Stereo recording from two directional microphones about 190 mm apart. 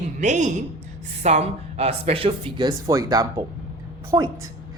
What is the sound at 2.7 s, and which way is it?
A woman's voice, 20° right (ahead or behind).